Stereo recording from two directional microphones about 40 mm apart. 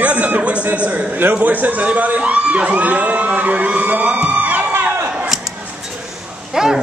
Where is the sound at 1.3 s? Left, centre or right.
Right.